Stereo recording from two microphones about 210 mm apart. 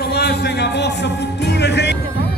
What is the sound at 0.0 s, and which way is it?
Music, 50° left (ahead or behind).